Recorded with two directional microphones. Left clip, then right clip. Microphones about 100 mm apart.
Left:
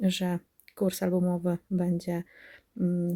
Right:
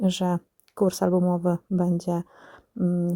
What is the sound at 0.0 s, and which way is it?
Speech, 35° right (ahead or behind).